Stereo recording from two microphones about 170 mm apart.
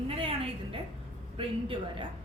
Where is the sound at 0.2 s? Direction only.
30° right (ahead or behind).